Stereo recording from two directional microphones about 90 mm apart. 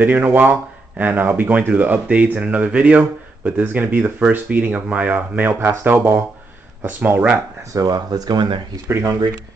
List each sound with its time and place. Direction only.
0.0 s speech: 20° right (ahead or behind)
7.7 s speech: 45° right (ahead or behind)